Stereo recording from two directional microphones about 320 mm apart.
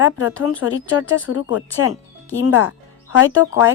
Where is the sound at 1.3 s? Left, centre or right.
Left.